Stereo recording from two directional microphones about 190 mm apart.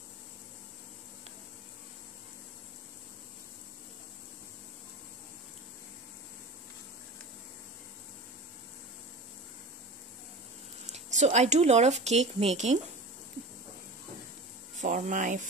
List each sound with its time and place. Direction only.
10.9 s speech: 35° right (ahead or behind)
14.8 s speech: 40° right (ahead or behind)